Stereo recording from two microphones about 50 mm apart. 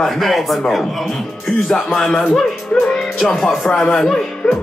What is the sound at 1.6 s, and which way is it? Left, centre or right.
Speech, centre.